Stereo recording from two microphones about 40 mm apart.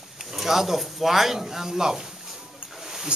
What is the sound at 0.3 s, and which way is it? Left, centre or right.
Speech, centre.